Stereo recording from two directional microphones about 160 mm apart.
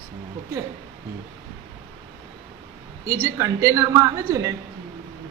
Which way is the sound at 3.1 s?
20° right (ahead or behind).